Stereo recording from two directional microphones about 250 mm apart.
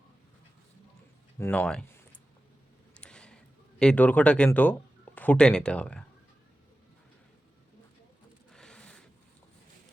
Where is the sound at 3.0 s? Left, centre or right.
Centre.